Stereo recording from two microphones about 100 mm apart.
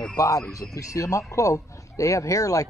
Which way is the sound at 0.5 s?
35° left (ahead or behind).